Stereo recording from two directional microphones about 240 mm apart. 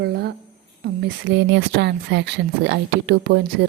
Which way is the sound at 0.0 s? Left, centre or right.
Right.